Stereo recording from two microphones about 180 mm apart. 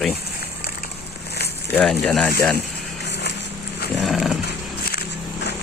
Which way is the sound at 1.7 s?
5° left (ahead or behind).